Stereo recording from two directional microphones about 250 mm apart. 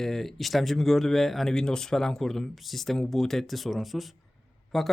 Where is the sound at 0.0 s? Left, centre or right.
Centre.